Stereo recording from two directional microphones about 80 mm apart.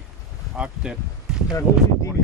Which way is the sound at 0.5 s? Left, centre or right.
Centre.